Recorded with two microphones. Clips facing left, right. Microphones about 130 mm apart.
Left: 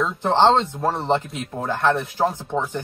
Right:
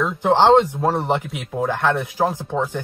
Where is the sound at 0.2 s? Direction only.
15° right (ahead or behind).